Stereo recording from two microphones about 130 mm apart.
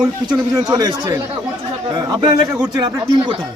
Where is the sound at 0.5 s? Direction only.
30° right (ahead or behind).